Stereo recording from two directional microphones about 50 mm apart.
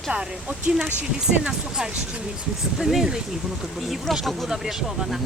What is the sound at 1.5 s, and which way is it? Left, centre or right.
Speech, centre.